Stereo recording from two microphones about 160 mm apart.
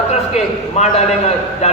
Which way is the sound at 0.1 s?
45° left (ahead or behind).